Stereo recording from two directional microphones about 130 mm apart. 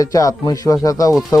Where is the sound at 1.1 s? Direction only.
5° right (ahead or behind).